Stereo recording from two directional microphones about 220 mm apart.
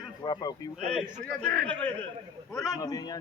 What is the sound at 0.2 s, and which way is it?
Speech, 15° left (ahead or behind).